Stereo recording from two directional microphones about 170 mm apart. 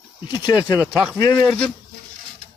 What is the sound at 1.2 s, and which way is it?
Speech, 15° left (ahead or behind).